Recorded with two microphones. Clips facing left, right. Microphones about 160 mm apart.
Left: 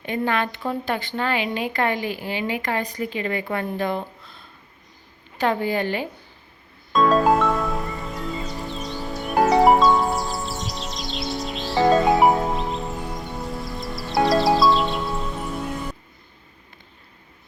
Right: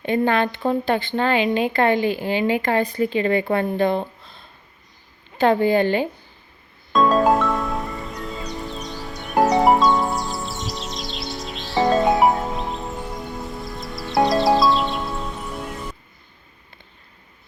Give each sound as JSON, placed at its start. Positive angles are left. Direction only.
{"t": 0.0, "sound": "speech", "side_deg": -30}
{"t": 5.4, "sound": "speech", "side_deg": -30}
{"t": 6.9, "sound": "music", "side_deg": 0}
{"t": 13.7, "sound": "music", "side_deg": 0}